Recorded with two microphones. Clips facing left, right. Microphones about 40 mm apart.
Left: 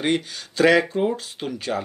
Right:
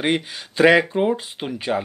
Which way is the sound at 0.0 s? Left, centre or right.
Right.